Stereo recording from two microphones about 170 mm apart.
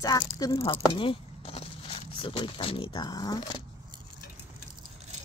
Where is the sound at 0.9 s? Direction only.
30° left (ahead or behind).